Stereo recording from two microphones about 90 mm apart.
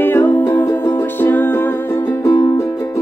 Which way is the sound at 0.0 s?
20° left (ahead or behind).